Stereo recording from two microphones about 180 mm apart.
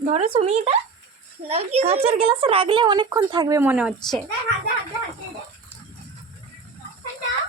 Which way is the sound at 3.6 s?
10° right (ahead or behind).